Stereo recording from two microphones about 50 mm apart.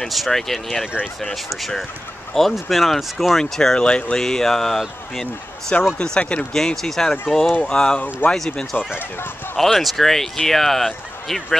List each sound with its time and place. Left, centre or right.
0.1 s speech: centre
5.9 s speech: centre
6.5 s speech: centre
8.2 s speech: left
9.6 s speech: centre